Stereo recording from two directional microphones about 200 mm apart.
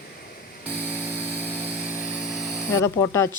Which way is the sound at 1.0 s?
10° right (ahead or behind).